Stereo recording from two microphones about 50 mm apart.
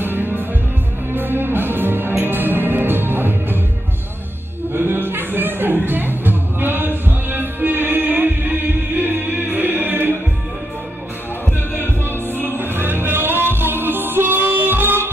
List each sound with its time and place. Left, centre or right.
0.0 s music: right
4.7 s music: right
12.4 s music: right